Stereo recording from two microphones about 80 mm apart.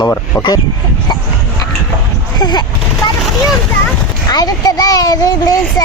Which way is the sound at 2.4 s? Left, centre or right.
Left.